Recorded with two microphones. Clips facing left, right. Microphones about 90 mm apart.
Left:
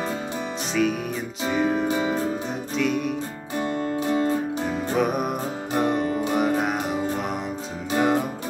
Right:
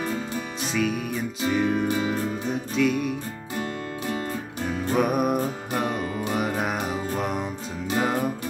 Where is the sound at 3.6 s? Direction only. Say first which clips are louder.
Left 7 dB; 30° left (ahead or behind).